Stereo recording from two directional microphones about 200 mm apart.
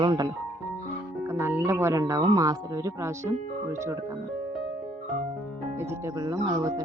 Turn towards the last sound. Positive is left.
turn(degrees=-20)  # may be behind; listen again after turning